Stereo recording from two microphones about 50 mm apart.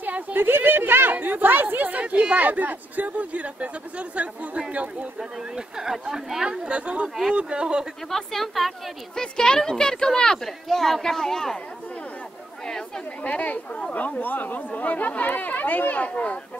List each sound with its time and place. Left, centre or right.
0.0 s a sound: right
1.1 s speech: right
5.8 s speech: centre
8.1 s a woman's voice: centre
9.1 s speech: centre
12.6 s chatter: centre
13.2 s speech: left